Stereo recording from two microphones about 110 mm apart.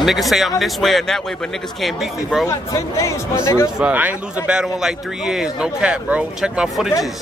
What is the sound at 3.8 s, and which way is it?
A man's voice, 15° right (ahead or behind).